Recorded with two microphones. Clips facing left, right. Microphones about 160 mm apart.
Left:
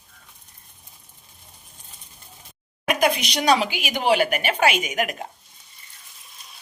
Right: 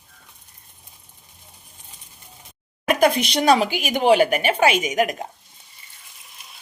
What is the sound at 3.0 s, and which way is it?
A woman's voice, 55° right (ahead or behind).